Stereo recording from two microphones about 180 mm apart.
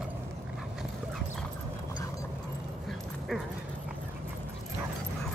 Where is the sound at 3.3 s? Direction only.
5° left (ahead or behind).